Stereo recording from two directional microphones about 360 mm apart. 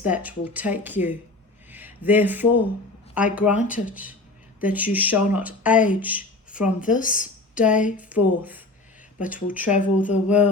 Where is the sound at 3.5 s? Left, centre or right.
Left.